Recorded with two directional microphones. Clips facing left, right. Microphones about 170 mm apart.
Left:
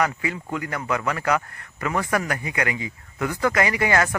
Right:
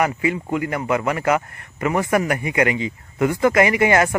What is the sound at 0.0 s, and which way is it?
Speech, 20° right (ahead or behind).